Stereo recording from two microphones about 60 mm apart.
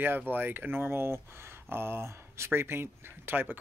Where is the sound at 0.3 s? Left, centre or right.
Right.